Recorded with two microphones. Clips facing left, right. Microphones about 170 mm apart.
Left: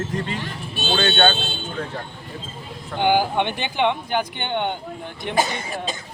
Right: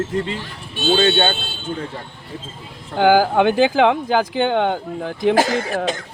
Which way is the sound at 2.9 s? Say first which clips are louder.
Right 5 dB; 90° right.